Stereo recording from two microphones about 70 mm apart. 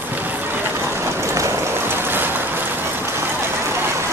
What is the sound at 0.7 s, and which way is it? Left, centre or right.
Vehicle, right.